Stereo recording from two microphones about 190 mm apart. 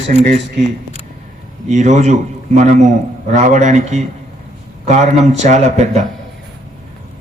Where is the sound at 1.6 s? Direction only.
40° right (ahead or behind).